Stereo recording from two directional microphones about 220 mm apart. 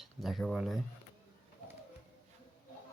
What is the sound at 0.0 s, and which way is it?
Speech, centre (ahead or behind).